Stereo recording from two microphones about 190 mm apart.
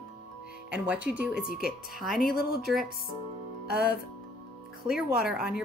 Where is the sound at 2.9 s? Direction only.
50° left (ahead or behind).